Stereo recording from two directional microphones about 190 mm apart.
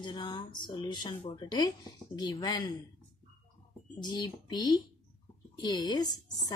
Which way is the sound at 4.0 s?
20° left (ahead or behind).